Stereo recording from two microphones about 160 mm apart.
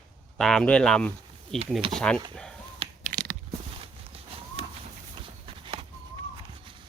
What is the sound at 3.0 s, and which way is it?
Mechanisms, 65° right (ahead or behind).